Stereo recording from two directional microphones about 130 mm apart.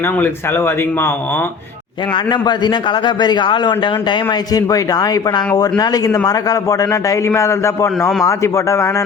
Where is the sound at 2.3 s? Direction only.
35° left (ahead or behind).